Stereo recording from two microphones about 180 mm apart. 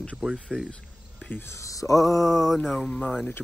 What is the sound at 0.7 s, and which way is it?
Speech, 10° left (ahead or behind).